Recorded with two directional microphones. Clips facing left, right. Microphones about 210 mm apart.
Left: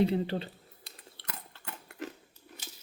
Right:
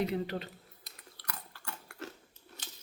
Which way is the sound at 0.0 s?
30° left (ahead or behind).